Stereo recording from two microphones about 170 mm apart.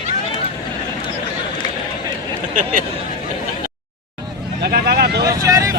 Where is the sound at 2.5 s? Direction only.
50° right (ahead or behind).